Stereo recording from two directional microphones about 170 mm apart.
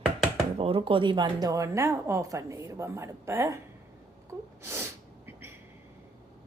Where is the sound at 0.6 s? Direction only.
35° right (ahead or behind); by 3.6 s 15° right (ahead or behind).